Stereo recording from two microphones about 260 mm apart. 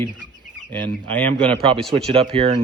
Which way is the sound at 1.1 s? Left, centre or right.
Centre.